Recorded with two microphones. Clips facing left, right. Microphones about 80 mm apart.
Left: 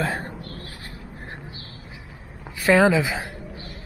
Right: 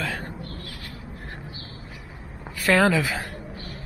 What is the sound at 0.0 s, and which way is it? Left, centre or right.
Speech, left.